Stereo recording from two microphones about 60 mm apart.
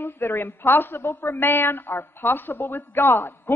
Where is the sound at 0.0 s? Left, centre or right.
Left.